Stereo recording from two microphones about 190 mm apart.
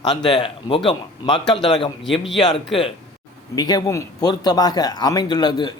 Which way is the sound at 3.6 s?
20° left (ahead or behind).